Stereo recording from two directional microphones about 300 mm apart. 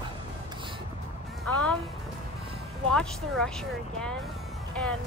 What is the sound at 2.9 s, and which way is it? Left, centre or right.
Speech, centre.